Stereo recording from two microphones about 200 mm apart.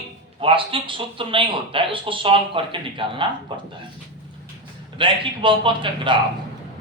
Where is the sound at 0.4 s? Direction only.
25° right (ahead or behind).